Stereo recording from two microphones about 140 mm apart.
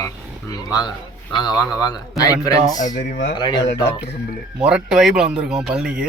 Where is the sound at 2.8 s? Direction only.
65° left (ahead or behind).